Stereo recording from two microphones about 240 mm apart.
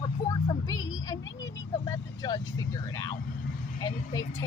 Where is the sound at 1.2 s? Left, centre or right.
Left.